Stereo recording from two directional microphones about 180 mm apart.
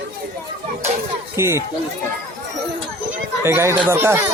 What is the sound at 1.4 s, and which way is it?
Speech, 15° right (ahead or behind).